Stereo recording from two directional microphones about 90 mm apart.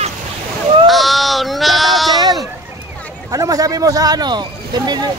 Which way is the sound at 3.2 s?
40° right (ahead or behind).